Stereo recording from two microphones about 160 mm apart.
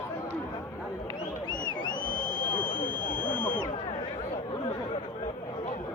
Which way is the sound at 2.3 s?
55° left (ahead or behind).